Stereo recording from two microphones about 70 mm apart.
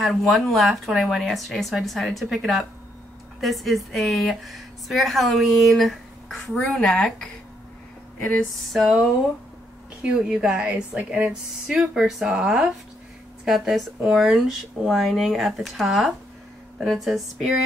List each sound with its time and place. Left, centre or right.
0.0 s a woman's voice: centre
8.7 s a woman's voice: centre